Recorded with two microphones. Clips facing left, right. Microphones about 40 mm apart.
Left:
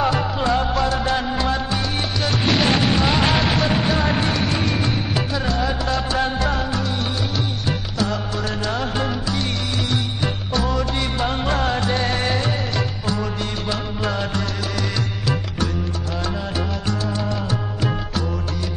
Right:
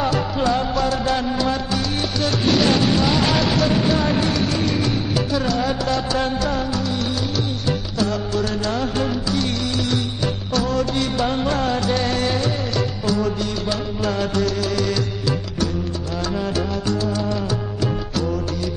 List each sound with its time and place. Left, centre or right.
0.0 s music: left
7.6 s music: left